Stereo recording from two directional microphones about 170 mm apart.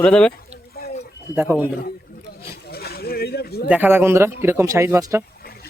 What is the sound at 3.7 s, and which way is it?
Speech, 10° right (ahead or behind).